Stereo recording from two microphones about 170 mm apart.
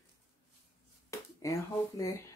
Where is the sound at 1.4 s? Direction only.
20° left (ahead or behind).